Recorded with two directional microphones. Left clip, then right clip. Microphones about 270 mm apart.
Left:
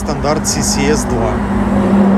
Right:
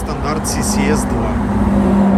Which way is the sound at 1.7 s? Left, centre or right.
Left.